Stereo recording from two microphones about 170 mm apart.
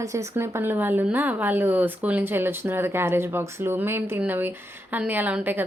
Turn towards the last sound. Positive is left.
turn(degrees=-10)  # may be behind; listen again after turning